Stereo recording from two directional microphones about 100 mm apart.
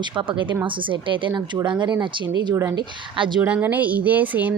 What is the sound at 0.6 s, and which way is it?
Speech, 55° right (ahead or behind).